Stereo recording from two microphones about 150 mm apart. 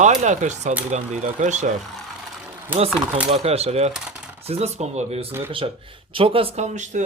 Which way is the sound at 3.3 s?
45° right (ahead or behind).